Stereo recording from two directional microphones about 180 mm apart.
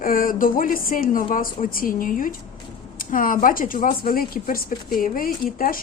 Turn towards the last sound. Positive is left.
turn(degrees=50)  # may be behind; listen again after turning